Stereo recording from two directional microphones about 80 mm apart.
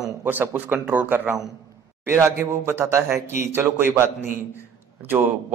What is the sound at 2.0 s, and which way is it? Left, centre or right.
A man's voice, right.